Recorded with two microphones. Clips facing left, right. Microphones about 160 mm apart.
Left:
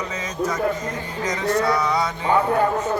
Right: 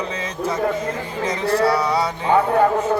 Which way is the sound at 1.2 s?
30° right (ahead or behind).